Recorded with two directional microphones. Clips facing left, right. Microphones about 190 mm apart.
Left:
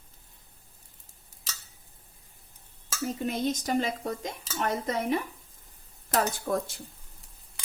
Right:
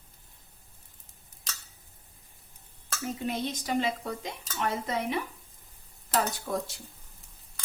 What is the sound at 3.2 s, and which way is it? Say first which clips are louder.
A woman's voice: left 3 dB; 45° left (ahead or behind).